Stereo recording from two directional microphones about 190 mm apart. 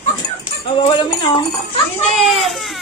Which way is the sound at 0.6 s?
25° left (ahead or behind).